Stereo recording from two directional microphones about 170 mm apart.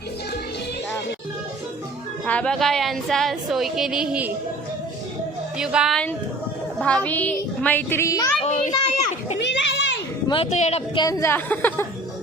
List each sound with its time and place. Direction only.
2.2 s speech: 5° left (ahead or behind)
5.5 s a woman's voice: 5° right (ahead or behind); by 8.3 s 20° left (ahead or behind)
8.4 s children playing: 45° left (ahead or behind)
9.4 s children playing: 90° left
10.2 s speech: 35° left (ahead or behind)
11.0 s a woman's voice: 20° left (ahead or behind)